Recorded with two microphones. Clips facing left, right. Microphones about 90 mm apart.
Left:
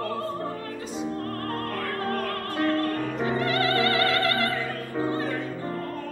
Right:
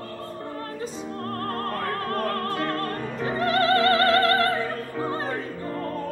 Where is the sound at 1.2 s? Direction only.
40° right (ahead or behind).